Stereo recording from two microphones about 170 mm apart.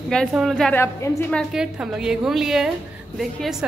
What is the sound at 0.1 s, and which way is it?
A woman's voice, centre (ahead or behind).